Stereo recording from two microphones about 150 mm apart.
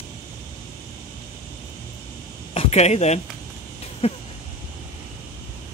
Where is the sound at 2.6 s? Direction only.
45° left (ahead or behind).